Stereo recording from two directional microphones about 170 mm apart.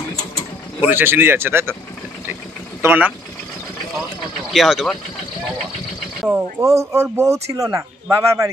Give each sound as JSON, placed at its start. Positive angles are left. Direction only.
{"t": 0.2, "sound": "mechanisms", "side_deg": 25}
{"t": 0.8, "sound": "speech", "side_deg": -10}
{"t": 2.8, "sound": "speech", "side_deg": -10}
{"t": 4.5, "sound": "speech", "side_deg": 0}
{"t": 6.2, "sound": "speech", "side_deg": -15}